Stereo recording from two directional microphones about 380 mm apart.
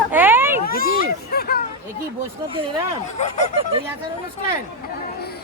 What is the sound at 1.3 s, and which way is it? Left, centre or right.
Speech, left.